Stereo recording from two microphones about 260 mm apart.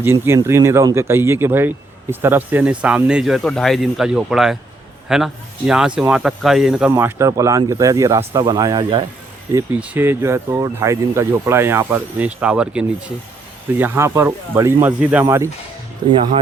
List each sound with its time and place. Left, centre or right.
0.0 s speech: centre